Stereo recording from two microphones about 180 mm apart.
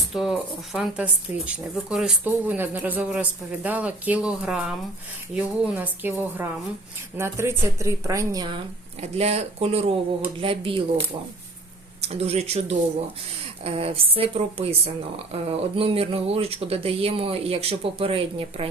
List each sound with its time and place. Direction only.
0.1 s speech: centre (ahead or behind); by 8.5 s 20° right (ahead or behind)
9.0 s speech: 35° right (ahead or behind)
12.0 s speech: 35° right (ahead or behind)